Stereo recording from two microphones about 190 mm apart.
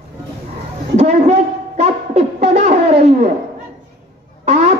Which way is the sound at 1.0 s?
35° right (ahead or behind).